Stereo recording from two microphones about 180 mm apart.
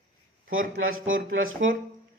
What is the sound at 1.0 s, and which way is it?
Speech, 90° right.